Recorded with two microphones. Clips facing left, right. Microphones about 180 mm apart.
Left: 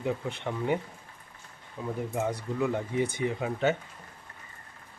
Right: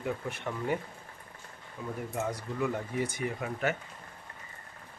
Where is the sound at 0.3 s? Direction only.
20° left (ahead or behind).